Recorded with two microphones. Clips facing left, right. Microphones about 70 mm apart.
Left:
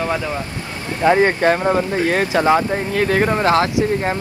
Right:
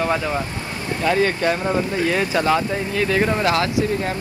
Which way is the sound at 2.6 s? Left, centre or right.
Left.